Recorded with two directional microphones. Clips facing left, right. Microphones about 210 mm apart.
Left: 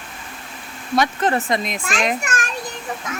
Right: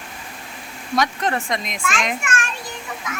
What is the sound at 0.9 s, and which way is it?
Speech, 5° left (ahead or behind).